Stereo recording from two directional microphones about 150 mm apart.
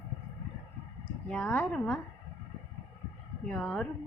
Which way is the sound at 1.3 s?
10° left (ahead or behind).